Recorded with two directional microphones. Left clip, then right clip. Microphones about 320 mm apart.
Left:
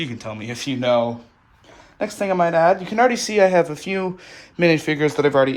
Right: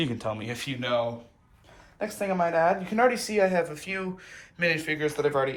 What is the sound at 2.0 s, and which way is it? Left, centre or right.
Speech, left.